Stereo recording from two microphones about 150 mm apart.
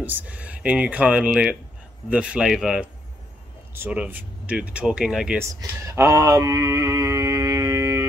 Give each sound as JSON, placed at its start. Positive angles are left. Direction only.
{"t": 0.0, "sound": "speech", "side_deg": -10}
{"t": 5.4, "sound": "speech", "side_deg": -20}